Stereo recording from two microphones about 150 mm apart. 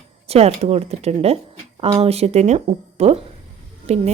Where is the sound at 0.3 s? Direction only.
45° right (ahead or behind).